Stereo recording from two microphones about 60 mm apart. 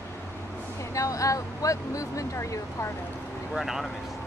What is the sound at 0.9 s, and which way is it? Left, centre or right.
Speech, left.